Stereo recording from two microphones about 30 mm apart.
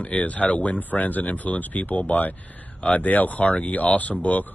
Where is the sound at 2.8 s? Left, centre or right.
Left.